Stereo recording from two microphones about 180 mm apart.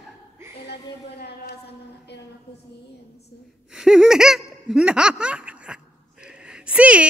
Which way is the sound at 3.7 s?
5° right (ahead or behind).